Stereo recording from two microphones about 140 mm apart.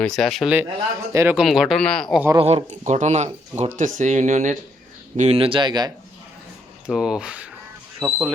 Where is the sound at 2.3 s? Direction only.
50° right (ahead or behind).